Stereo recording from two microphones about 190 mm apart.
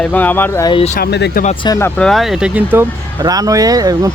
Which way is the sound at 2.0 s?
Centre (ahead or behind).